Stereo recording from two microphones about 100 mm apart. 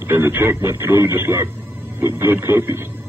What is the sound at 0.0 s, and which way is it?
Speech, 25° right (ahead or behind).